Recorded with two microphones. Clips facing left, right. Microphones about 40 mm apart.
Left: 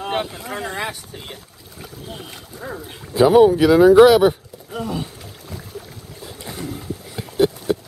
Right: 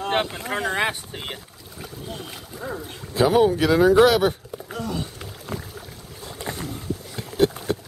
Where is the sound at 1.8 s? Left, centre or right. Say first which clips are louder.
Even; centre.